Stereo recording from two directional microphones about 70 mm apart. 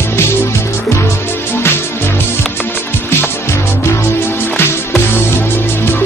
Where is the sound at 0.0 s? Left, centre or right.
Left.